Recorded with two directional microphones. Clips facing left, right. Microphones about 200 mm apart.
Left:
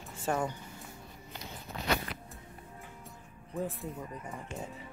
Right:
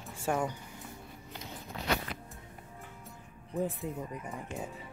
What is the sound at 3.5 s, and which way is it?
Speech, 15° right (ahead or behind).